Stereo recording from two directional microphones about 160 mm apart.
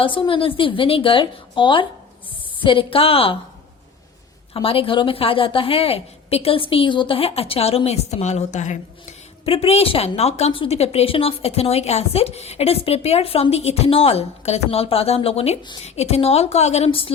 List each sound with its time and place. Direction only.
0.0 s a woman's voice: 30° left (ahead or behind)
4.5 s a woman's voice: 35° left (ahead or behind)